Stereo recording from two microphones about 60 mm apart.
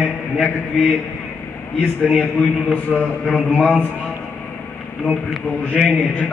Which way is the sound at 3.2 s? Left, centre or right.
Centre.